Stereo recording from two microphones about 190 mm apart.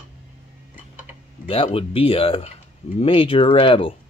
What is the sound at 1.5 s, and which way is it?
A man's voice, 30° left (ahead or behind).